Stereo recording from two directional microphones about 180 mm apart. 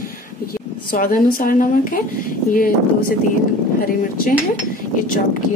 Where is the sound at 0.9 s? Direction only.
50° left (ahead or behind).